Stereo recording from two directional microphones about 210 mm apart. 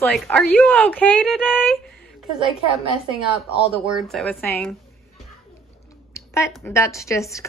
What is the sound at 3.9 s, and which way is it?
Speech, centre (ahead or behind).